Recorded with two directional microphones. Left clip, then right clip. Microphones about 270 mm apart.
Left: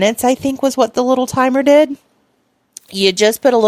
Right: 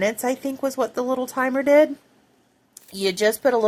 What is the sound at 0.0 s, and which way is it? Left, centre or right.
Speech, left.